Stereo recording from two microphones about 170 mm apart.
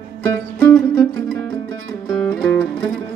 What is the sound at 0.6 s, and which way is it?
Music, 5° left (ahead or behind).